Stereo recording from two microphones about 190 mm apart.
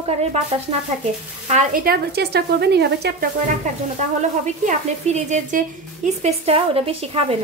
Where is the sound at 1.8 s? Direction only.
60° right (ahead or behind).